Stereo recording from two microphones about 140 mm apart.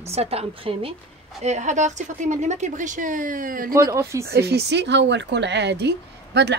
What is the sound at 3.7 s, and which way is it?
Speech, 20° right (ahead or behind).